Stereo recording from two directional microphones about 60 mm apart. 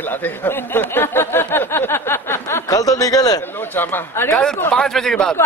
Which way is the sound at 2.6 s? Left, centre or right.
Left.